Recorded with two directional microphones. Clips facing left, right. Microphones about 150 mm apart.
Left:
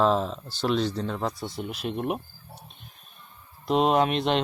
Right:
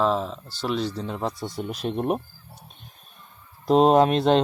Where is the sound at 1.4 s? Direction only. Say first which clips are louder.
Right 3 dB; 45° right (ahead or behind).